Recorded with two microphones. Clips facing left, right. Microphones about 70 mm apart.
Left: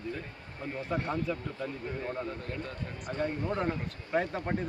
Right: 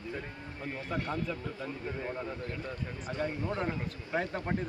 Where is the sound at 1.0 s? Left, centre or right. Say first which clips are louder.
Left 1 dB; left.